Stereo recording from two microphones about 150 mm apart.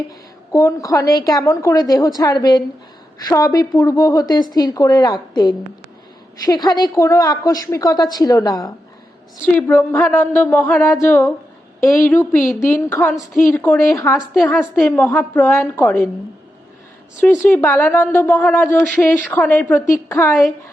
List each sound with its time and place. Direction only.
0.5 s a woman's voice: 20° left (ahead or behind)
9.5 s a woman's voice: 15° left (ahead or behind)
14.2 s a woman's voice: centre (ahead or behind)
14.8 s speech: 15° left (ahead or behind)
17.5 s speech: 15° left (ahead or behind)